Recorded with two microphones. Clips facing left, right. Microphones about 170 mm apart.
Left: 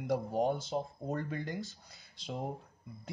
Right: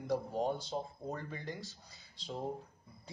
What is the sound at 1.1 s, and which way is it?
Speech, 60° left (ahead or behind).